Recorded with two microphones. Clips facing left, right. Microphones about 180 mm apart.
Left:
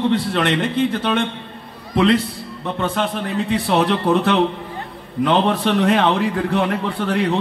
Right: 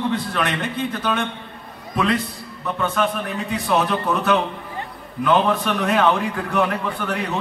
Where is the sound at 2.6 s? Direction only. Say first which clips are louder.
Even; 30° left (ahead or behind).